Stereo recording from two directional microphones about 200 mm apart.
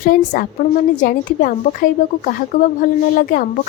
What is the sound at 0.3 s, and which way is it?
A woman's voice, 45° left (ahead or behind).